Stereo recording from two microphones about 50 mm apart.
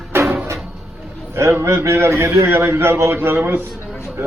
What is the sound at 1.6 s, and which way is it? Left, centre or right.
A man's voice, right.